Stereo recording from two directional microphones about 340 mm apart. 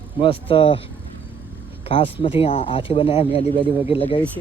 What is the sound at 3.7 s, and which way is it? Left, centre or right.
Speech, centre.